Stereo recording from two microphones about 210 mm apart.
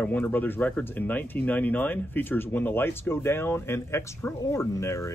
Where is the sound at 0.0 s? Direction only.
10° left (ahead or behind).